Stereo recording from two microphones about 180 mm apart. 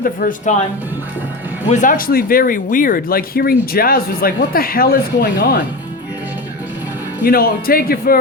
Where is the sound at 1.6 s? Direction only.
45° left (ahead or behind).